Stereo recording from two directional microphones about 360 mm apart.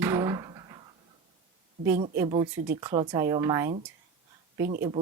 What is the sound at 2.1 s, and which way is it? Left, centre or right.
A woman's voice, centre.